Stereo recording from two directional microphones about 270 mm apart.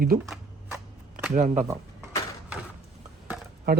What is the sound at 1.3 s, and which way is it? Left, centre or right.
Speech, right.